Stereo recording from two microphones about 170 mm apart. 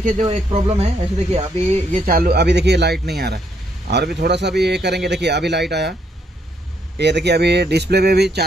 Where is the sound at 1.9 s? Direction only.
60° right (ahead or behind); by 5.9 s 80° right.